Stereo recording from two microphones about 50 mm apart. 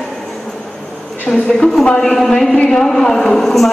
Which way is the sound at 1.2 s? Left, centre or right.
Centre.